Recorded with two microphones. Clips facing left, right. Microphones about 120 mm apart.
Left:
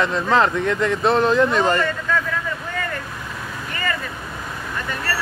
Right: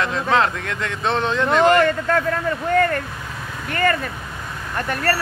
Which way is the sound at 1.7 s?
65° right (ahead or behind).